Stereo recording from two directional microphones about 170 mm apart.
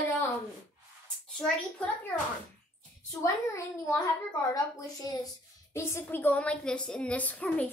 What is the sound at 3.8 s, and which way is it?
A woman's voice, 20° left (ahead or behind).